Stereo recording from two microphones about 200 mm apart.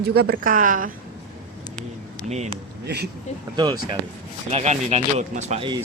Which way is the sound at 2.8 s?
55° right (ahead or behind).